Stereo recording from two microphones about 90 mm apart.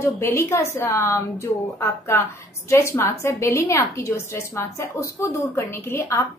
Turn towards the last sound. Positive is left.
turn(degrees=35)  # may be behind; listen again after turning